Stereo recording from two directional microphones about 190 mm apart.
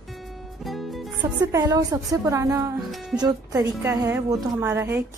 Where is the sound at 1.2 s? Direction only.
20° right (ahead or behind).